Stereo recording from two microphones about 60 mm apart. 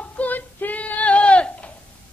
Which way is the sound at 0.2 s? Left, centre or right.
Left.